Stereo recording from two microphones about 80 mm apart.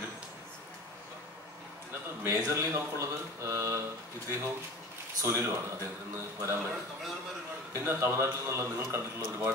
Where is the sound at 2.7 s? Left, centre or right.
Right.